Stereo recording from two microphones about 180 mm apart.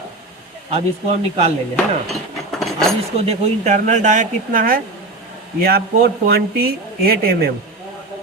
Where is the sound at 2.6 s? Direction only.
Centre (ahead or behind).